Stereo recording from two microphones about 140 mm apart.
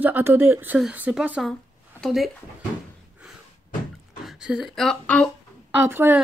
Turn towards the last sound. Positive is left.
turn(degrees=-15)  # may be behind; listen again after turning